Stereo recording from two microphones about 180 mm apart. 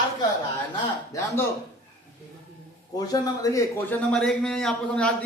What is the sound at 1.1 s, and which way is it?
Speech, 20° left (ahead or behind).